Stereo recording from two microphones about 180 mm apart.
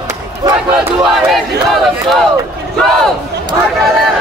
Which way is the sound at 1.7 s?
Centre (ahead or behind).